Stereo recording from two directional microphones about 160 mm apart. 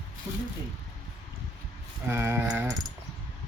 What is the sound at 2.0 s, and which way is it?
Speech, 15° right (ahead or behind).